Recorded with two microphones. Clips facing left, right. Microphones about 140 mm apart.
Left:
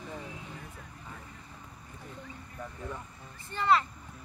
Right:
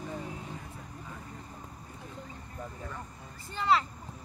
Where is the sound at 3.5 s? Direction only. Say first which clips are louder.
Left 1 dB; centre (ahead or behind).